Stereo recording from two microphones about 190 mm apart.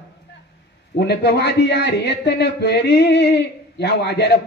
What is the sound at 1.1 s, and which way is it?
A man's voice, 60° left (ahead or behind).